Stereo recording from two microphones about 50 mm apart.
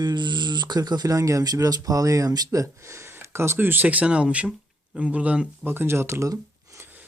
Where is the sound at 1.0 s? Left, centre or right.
Right.